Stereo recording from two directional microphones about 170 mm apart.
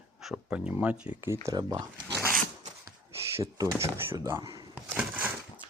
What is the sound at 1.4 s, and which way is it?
Speech, 25° right (ahead or behind).